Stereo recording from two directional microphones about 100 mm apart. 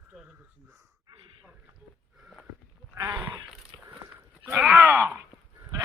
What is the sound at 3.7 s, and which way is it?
Biting, 45° right (ahead or behind).